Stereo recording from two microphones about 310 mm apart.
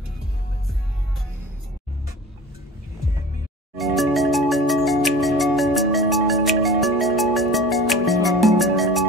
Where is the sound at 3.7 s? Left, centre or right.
Centre.